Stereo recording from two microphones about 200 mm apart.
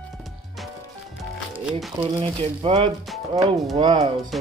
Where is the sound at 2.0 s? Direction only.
25° right (ahead or behind).